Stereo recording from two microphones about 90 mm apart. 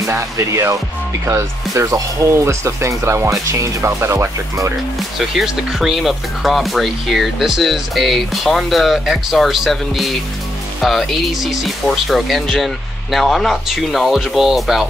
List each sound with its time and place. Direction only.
0.0 s speech: 35° right (ahead or behind)
5.3 s speech: 5° right (ahead or behind)